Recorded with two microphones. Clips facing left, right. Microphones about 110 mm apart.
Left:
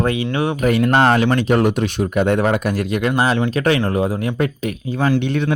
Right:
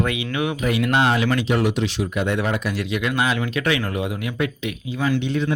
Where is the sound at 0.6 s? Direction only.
45° left (ahead or behind).